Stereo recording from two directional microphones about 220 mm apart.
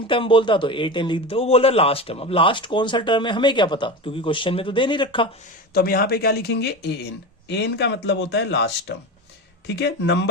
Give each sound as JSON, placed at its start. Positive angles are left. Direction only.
{"t": 0.1, "sound": "a man's voice", "side_deg": 25}
{"t": 5.7, "sound": "speech", "side_deg": 45}